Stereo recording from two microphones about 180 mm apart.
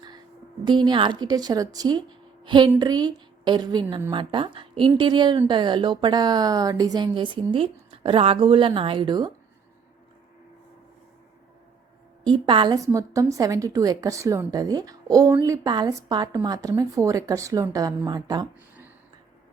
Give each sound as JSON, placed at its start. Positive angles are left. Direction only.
{"t": 0.6, "sound": "a woman's voice", "side_deg": -25}
{"t": 12.2, "sound": "a woman's voice", "side_deg": -25}